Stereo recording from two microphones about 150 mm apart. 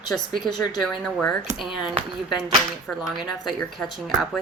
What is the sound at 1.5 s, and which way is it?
Speech, 35° left (ahead or behind).